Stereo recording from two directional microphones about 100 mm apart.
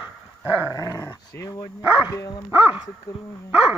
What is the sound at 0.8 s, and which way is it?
Dog, 40° left (ahead or behind).